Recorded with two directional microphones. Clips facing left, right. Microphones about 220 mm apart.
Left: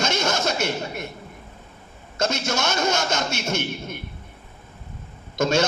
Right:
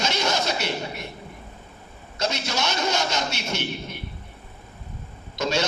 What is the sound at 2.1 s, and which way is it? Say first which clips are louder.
A man's voice: left 3 dB; 50° left (ahead or behind).